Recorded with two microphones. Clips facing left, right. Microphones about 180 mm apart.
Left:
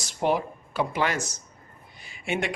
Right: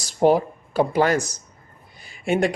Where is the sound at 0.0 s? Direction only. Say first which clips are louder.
Right 8 dB; 40° right (ahead or behind).